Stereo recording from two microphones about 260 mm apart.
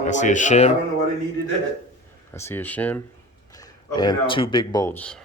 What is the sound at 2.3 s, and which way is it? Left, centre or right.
Speech, centre.